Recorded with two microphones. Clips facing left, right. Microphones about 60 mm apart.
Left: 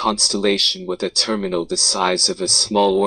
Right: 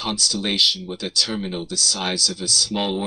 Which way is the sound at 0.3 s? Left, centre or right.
Left.